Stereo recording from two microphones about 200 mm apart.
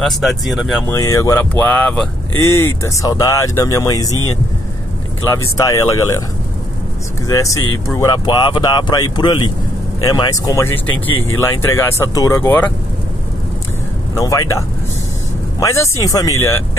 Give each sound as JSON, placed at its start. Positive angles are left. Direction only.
{"t": 0.0, "sound": "speech", "side_deg": 0}
{"t": 0.8, "sound": "speech", "side_deg": 15}
{"t": 5.6, "sound": "speech", "side_deg": 15}
{"t": 7.2, "sound": "speech", "side_deg": 15}
{"t": 14.1, "sound": "speech", "side_deg": 15}
{"t": 15.6, "sound": "speech", "side_deg": 15}